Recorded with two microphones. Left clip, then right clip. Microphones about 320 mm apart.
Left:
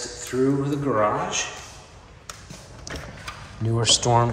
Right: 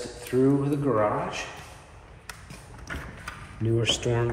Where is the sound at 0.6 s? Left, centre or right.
Centre.